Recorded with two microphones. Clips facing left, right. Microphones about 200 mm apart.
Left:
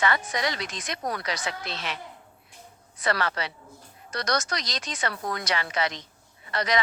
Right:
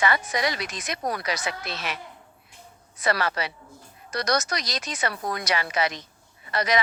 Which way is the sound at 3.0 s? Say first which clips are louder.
Right 2 dB; 15° right (ahead or behind).